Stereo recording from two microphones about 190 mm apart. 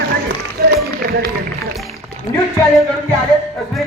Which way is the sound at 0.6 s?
55° right (ahead or behind).